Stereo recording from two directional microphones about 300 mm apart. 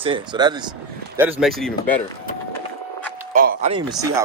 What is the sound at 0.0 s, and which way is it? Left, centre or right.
Speech, centre.